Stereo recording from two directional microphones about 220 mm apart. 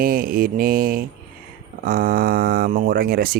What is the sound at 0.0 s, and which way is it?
Speech, 40° right (ahead or behind).